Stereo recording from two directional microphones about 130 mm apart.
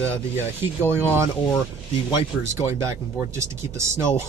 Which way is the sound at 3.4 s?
20° right (ahead or behind).